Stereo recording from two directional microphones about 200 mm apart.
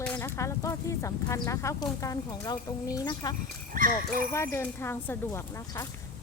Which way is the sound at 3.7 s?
45° right (ahead or behind).